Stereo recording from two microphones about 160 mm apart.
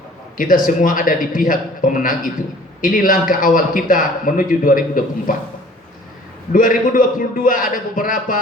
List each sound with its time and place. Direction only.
0.3 s a man's voice: 60° left (ahead or behind)
6.5 s a man's voice: 60° left (ahead or behind)